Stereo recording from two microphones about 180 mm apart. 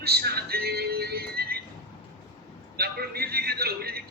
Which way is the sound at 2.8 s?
60° right (ahead or behind).